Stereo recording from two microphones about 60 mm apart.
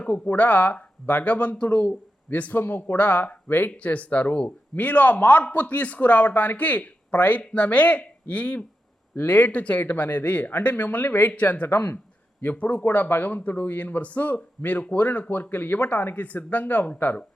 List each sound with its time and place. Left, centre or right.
0.0 s speech: left
11.7 s speech: left
12.4 s speech: left